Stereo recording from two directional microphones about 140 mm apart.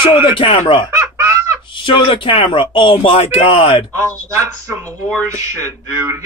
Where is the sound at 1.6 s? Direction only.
35° left (ahead or behind).